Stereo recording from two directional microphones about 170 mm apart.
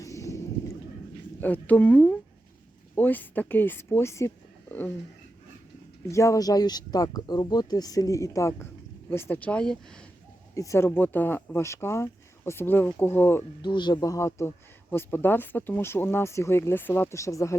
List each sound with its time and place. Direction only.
0.0 s a sound: 20° left (ahead or behind)
1.4 s speech: 10° left (ahead or behind)
6.1 s speech: 15° left (ahead or behind)
10.5 s speech: 20° left (ahead or behind)
13.6 s speech: 25° left (ahead or behind)